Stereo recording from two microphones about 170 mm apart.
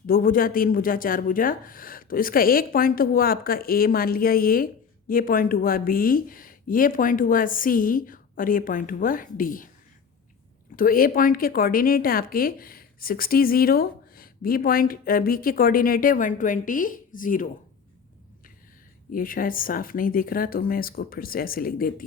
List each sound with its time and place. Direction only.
0.1 s speech: 55° left (ahead or behind)
10.8 s speech: 55° left (ahead or behind)
19.1 s speech: 55° left (ahead or behind)